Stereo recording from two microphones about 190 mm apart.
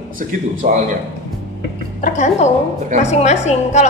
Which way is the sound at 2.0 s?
40° left (ahead or behind).